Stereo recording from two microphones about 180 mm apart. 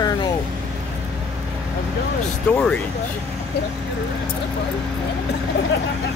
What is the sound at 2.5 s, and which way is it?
Speech, 5° left (ahead or behind).